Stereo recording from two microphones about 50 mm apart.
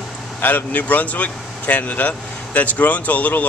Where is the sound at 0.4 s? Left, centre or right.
Left.